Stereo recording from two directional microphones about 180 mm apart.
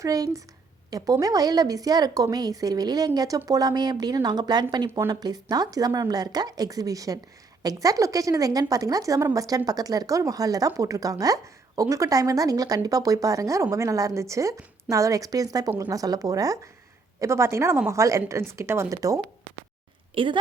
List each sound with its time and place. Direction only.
0.0 s a woman's voice: 20° right (ahead or behind)